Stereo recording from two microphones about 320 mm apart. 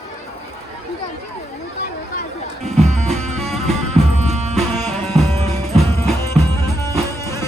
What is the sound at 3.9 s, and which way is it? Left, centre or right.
Music, centre.